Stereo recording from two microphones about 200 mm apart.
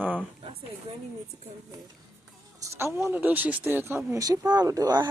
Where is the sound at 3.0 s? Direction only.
10° right (ahead or behind).